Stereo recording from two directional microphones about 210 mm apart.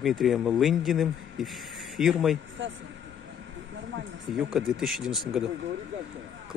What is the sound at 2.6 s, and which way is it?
Speech, 60° right (ahead or behind).